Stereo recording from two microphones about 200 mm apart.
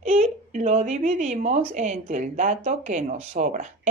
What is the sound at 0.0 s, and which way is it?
Speech, 35° right (ahead or behind).